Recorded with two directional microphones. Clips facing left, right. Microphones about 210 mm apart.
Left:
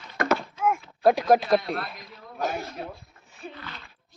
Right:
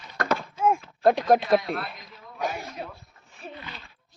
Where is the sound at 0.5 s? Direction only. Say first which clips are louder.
Right 2 dB; 30° right (ahead or behind).